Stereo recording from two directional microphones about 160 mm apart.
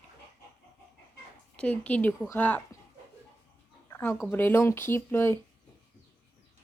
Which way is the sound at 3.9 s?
15° left (ahead or behind).